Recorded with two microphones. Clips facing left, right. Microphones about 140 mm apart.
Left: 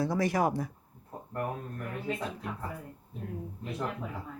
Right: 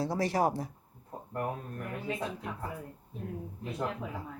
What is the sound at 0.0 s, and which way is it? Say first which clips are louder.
Speech: left 1 dB; 30° right (ahead or behind).